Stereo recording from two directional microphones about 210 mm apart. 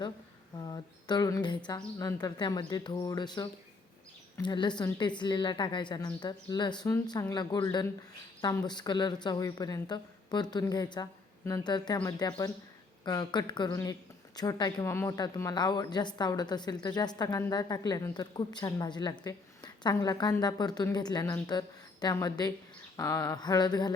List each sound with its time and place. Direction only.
0.5 s speech: 20° left (ahead or behind)